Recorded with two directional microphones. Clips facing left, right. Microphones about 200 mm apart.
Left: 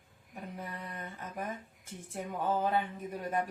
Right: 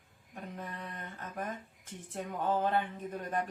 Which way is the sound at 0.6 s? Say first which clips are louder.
Left 1 dB; 10° left (ahead or behind).